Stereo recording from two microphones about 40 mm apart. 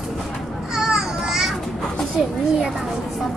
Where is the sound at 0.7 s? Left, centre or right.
Centre.